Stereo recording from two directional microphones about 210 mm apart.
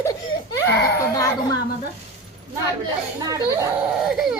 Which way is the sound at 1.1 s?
15° left (ahead or behind).